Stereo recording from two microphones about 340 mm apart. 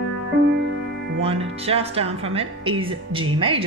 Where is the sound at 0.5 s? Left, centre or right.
Right.